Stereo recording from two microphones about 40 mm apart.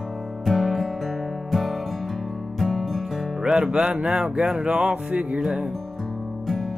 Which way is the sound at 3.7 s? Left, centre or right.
Right.